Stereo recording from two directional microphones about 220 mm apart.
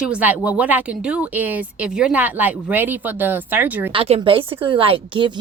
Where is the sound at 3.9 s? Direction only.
25° right (ahead or behind).